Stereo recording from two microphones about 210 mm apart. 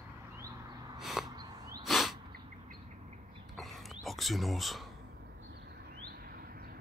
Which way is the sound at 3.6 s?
Centre (ahead or behind).